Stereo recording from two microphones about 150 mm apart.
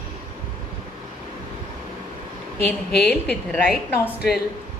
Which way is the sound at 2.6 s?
5° left (ahead or behind).